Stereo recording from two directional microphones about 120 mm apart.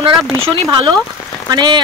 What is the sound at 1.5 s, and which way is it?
Speech, 40° right (ahead or behind).